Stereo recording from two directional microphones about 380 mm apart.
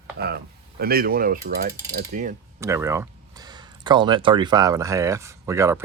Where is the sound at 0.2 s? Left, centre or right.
Right.